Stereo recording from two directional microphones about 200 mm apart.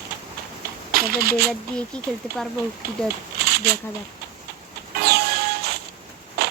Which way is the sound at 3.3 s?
55° right (ahead or behind).